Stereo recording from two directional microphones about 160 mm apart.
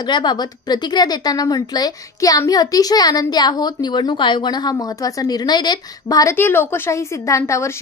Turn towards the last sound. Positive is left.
turn(degrees=15)  # may be behind; listen again after turning